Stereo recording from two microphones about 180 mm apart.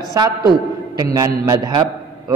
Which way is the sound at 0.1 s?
20° right (ahead or behind).